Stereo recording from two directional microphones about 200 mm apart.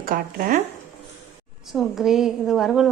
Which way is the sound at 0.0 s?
45° right (ahead or behind).